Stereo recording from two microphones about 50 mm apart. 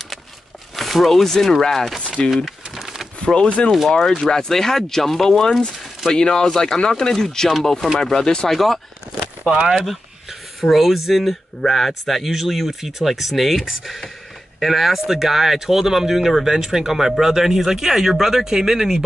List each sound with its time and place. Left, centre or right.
0.7 s speech: centre
2.0 s speech: left
2.3 s a sound: centre
3.2 s speech: centre
3.9 s speech: centre
8.5 s speech: centre
9.5 s speech: right
10.6 s speech: centre